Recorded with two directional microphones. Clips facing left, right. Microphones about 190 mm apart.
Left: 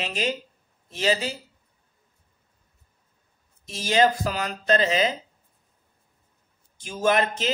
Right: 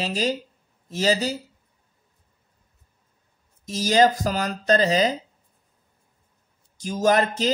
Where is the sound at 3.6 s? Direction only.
40° right (ahead or behind).